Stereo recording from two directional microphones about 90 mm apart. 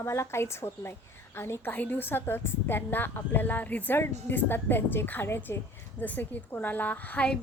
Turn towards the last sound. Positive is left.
turn(degrees=15)  # may be behind; listen again after turning